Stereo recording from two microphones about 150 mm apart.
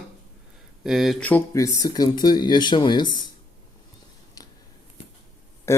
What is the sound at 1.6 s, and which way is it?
Speech, 25° left (ahead or behind).